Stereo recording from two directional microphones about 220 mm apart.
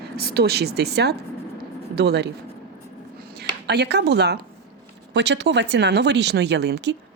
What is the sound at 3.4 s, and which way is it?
A woman's voice, 50° right (ahead or behind).